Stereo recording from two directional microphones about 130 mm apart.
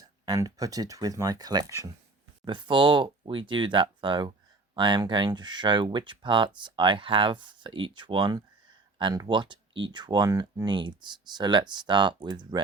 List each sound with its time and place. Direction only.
0.0 s speech: 25° right (ahead or behind)
2.4 s speech: 40° right (ahead or behind)